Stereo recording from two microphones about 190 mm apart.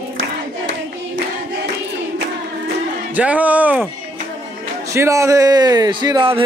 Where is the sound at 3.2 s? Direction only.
10° right (ahead or behind).